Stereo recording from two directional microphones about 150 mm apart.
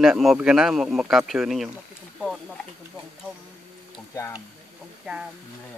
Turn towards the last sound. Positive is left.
turn(degrees=20)  # may be behind; listen again after turning